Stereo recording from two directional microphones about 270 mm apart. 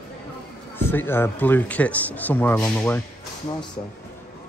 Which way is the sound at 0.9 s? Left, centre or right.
Centre.